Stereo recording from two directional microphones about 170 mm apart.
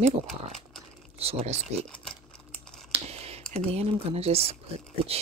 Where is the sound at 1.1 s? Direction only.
40° right (ahead or behind).